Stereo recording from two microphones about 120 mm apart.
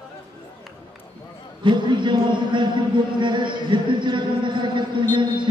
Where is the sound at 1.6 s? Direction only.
40° right (ahead or behind).